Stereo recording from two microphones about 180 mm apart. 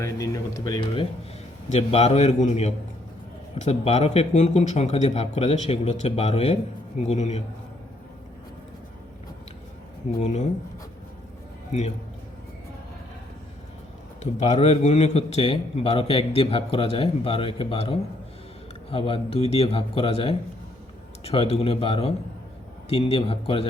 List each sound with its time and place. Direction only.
0.0 s speech: 20° left (ahead or behind)
1.7 s a man's voice: 35° left (ahead or behind)
10.2 s a man's voice: 40° left (ahead or behind)
14.2 s a man's voice: 40° left (ahead or behind)